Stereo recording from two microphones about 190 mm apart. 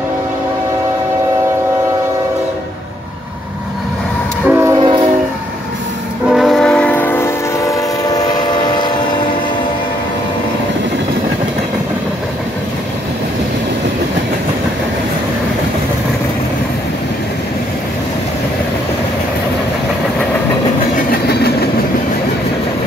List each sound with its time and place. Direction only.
4.5 s train: 10° right (ahead or behind)
4.7 s train: 25° right (ahead or behind)
6.2 s train: centre (ahead or behind); by 8.3 s 20° left (ahead or behind)
21.1 s train: 55° left (ahead or behind)